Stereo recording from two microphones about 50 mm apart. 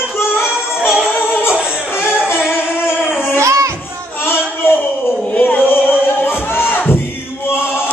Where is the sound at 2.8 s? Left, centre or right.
Left.